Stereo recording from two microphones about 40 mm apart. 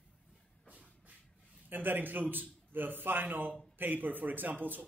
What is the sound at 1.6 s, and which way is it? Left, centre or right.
A man's voice, right.